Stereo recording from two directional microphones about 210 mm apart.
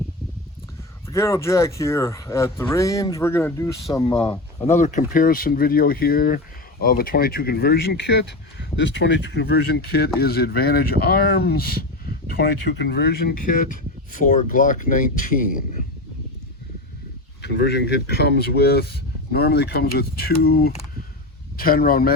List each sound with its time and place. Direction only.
1.1 s speech: 15° left (ahead or behind)
4.0 s speech: 25° left (ahead or behind)
17.4 s speech: 55° left (ahead or behind)